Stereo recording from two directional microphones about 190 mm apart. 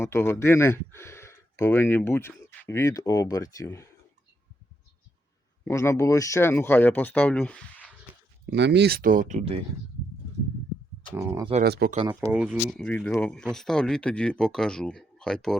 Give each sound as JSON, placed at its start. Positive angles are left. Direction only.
{"t": 0.0, "sound": "speech", "side_deg": 15}
{"t": 5.6, "sound": "speech", "side_deg": 15}
{"t": 8.4, "sound": "speech", "side_deg": -65}
{"t": 11.1, "sound": "speech", "side_deg": -15}
{"t": 11.6, "sound": "speech", "side_deg": -55}
{"t": 12.3, "sound": "speech", "side_deg": -5}
{"t": 12.7, "sound": "speech", "side_deg": 5}